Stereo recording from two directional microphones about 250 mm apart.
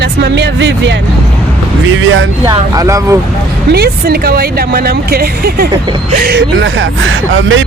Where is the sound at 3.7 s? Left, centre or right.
Right.